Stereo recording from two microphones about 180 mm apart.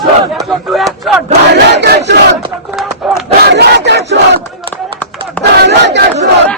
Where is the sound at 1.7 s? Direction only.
70° right (ahead or behind).